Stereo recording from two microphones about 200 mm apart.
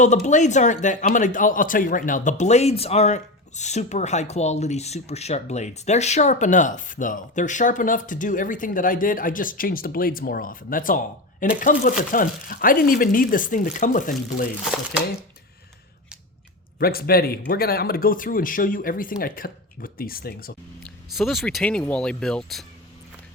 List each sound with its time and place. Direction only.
0.0 s a man's voice: 35° left (ahead or behind)
16.7 s speech: 50° left (ahead or behind)
20.8 s speech: centre (ahead or behind)